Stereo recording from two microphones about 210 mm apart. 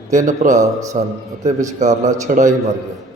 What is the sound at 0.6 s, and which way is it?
Speech, 15° right (ahead or behind).